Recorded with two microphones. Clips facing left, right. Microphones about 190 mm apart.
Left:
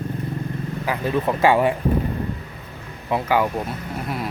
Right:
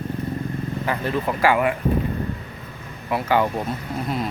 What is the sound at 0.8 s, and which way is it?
Speech, 15° left (ahead or behind).